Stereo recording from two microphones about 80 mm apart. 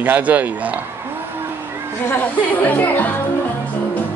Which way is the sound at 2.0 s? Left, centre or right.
Left.